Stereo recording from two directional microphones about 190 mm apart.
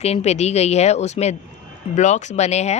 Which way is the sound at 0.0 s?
35° left (ahead or behind).